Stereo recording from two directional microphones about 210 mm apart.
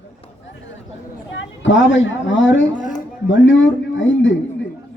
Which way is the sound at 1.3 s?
60° left (ahead or behind).